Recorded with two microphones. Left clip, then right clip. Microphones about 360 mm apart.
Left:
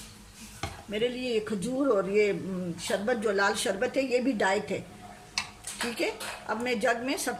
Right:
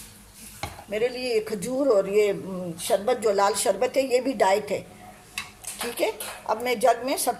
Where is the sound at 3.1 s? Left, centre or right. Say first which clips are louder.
Right 3 dB; centre.